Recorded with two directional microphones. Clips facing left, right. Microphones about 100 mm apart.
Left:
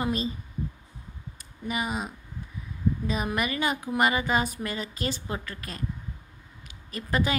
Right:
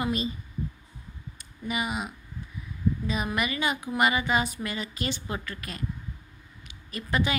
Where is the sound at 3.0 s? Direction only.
40° left (ahead or behind).